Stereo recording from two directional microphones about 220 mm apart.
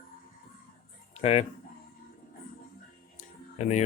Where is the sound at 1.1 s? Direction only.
25° left (ahead or behind).